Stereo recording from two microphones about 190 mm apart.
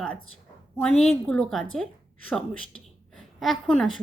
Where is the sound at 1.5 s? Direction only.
Centre (ahead or behind).